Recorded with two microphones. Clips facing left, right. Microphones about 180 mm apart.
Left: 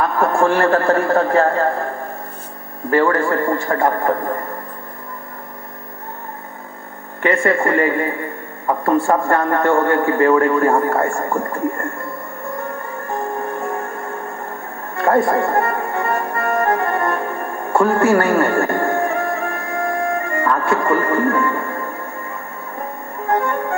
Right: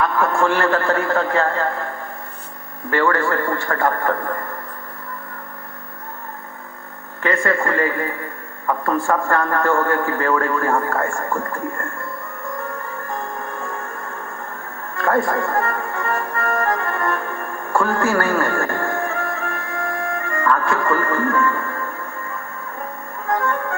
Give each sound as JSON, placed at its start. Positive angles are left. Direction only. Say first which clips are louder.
{"t": 0.0, "sound": "a man's voice", "louder": "left 2 dB", "side_deg": 30}
{"t": 2.9, "sound": "a man's voice", "louder": "left 3 dB", "side_deg": 30}
{"t": 7.2, "sound": "a man's voice", "louder": "left 3 dB", "side_deg": 20}
{"t": 11.2, "sound": "a man's voice", "louder": "left 3 dB", "side_deg": 20}
{"t": 15.0, "sound": "music", "louder": "left 4 dB", "side_deg": 20}
{"t": 16.1, "sound": "accordion", "louder": "left 1 dB", "side_deg": 20}
{"t": 17.2, "sound": "music", "louder": "left 4 dB", "side_deg": 20}
{"t": 23.3, "sound": "music", "louder": "left 3 dB", "side_deg": 20}